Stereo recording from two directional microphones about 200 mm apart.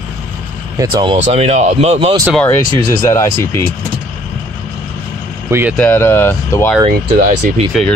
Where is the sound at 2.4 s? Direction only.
15° left (ahead or behind).